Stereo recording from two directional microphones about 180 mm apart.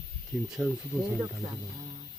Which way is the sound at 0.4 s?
5° right (ahead or behind).